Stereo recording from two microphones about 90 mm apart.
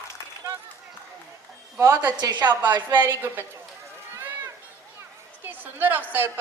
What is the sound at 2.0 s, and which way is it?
Speech, 50° right (ahead or behind).